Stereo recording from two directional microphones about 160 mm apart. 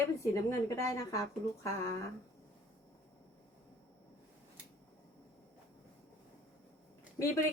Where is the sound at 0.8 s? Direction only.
20° left (ahead or behind).